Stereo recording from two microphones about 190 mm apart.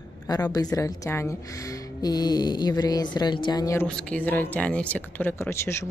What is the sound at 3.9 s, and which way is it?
Speech, 5° left (ahead or behind).